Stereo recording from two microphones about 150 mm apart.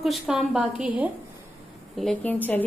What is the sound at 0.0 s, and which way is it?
A woman's voice, centre (ahead or behind).